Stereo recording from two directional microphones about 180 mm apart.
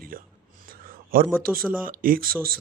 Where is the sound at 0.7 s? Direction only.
50° right (ahead or behind).